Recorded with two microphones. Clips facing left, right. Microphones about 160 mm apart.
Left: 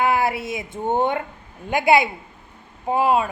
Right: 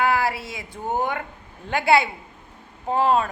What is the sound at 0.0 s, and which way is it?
Speech, 20° left (ahead or behind).